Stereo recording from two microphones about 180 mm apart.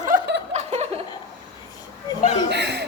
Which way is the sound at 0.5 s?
35° right (ahead or behind).